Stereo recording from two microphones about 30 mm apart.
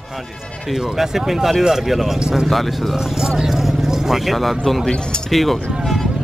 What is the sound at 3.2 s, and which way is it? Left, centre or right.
Speech, right.